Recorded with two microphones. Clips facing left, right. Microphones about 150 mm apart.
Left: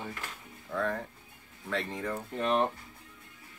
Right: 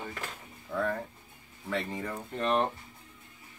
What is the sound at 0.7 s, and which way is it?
Speech, 5° right (ahead or behind).